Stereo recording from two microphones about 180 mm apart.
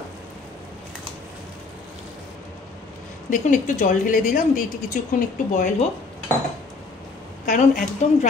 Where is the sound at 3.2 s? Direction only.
45° left (ahead or behind).